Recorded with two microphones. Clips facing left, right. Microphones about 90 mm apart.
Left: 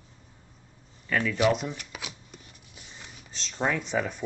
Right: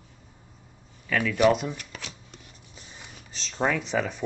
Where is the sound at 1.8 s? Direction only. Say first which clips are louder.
Even; 10° left (ahead or behind).